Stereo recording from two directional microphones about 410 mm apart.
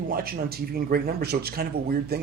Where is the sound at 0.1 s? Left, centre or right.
Right.